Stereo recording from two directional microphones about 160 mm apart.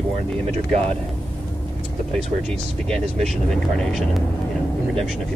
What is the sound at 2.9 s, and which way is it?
Speech, centre (ahead or behind).